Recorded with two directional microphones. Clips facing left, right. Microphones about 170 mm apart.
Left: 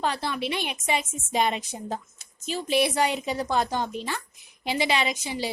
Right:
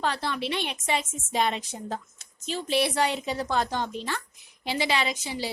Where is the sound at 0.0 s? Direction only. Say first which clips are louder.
Left 1 dB; 10° left (ahead or behind).